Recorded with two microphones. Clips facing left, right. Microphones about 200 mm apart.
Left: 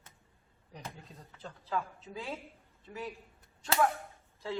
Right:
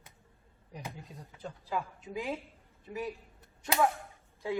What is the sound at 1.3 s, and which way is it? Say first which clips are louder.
A man's voice: even; 15° right (ahead or behind).